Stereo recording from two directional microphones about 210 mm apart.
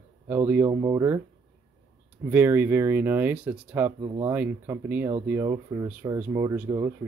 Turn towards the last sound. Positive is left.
turn(degrees=-10)  # may be behind; listen again after turning